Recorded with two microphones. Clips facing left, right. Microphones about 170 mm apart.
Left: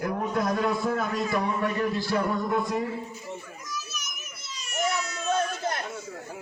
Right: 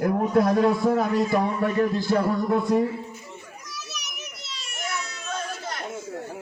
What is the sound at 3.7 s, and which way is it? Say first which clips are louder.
Children playing: left 2 dB; 80° right.